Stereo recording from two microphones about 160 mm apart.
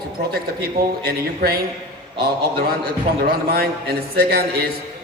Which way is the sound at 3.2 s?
75° right (ahead or behind).